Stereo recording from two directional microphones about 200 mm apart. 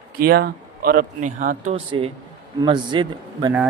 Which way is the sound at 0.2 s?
50° right (ahead or behind).